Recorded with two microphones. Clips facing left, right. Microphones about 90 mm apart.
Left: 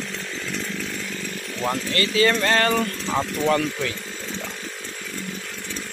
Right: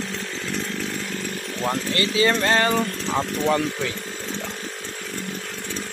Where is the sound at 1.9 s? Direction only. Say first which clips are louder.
Left 1 dB; 20° right (ahead or behind).